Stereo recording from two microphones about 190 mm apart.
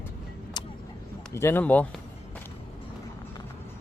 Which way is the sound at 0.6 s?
20° left (ahead or behind).